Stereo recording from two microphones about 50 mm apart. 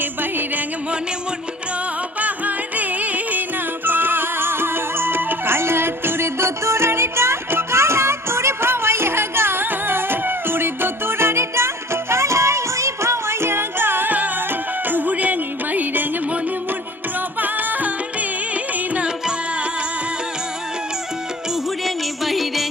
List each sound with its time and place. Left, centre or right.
0.0 s music: right
2.2 s music: right
17.4 s music: right
21.8 s music: centre